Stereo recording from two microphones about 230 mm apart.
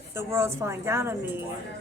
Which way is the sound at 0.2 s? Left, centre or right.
Centre.